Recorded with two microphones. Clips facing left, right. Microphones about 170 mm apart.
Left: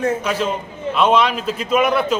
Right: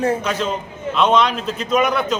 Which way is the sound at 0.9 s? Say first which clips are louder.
Even; 5° left (ahead or behind).